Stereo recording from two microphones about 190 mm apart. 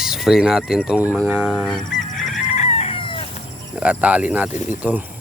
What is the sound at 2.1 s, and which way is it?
Chicken, centre (ahead or behind).